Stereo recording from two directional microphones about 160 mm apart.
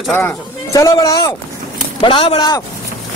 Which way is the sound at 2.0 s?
35° left (ahead or behind).